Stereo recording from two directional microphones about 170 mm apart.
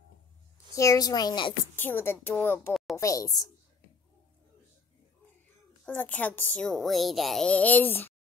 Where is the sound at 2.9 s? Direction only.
20° left (ahead or behind).